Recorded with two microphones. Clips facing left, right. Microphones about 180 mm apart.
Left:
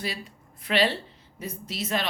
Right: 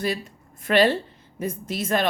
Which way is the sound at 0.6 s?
45° right (ahead or behind).